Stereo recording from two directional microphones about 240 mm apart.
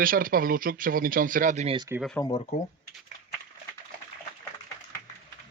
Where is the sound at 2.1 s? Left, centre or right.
Centre.